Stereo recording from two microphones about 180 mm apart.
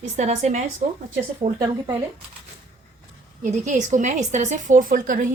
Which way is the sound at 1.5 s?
20° right (ahead or behind).